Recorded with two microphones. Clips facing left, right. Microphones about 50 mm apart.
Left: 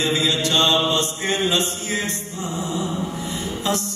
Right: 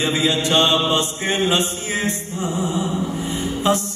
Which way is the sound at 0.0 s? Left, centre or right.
Right.